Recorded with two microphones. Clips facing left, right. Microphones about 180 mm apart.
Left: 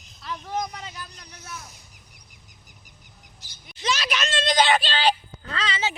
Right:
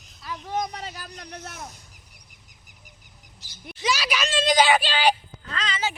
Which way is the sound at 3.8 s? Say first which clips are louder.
Right 1 dB; 10° right (ahead or behind).